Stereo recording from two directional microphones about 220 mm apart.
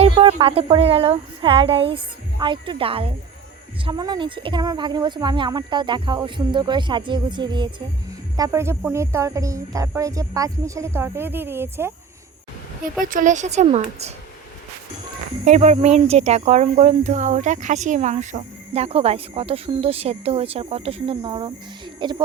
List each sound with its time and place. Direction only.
0.0 s speech: 25° right (ahead or behind)
13.0 s a woman's voice: 40° right (ahead or behind)
15.4 s speech: 30° right (ahead or behind)